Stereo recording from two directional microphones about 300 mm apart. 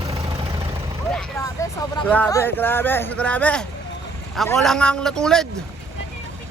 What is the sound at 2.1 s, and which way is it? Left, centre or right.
A man's voice, centre.